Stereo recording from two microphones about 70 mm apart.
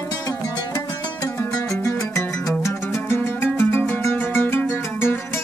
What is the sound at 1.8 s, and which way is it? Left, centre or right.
Music, left.